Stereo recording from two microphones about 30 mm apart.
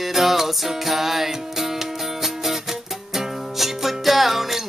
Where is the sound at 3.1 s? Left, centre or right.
Centre.